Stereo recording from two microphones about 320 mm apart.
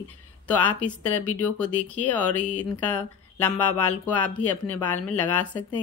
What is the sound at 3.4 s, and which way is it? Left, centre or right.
Speech, centre.